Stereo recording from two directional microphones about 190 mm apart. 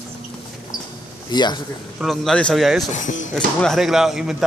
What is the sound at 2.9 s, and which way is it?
Speech, 40° left (ahead or behind).